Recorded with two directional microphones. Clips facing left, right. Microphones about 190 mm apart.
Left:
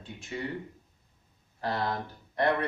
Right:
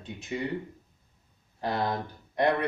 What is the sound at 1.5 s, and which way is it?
Speech, 15° right (ahead or behind).